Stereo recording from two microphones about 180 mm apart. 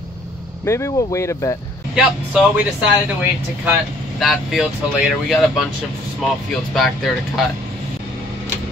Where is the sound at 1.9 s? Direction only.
5° right (ahead or behind).